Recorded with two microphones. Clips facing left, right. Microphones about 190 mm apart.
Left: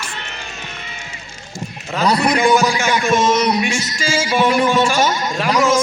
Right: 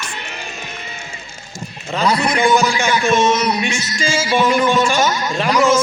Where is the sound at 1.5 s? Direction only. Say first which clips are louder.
Even; centre (ahead or behind).